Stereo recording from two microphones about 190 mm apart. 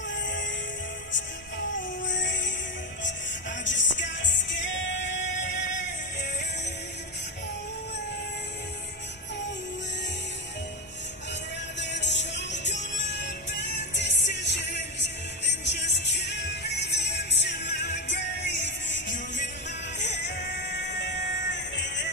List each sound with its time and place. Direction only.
0.2 s music: 70° left (ahead or behind)
2.0 s music: 75° left (ahead or behind)
3.6 s music: 40° left (ahead or behind)
4.2 s music: 70° left (ahead or behind)
5.5 s music: 40° left (ahead or behind)
11.8 s music: 65° left (ahead or behind)